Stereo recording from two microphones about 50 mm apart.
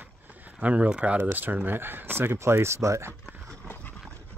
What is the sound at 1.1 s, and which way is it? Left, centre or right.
Speech, right.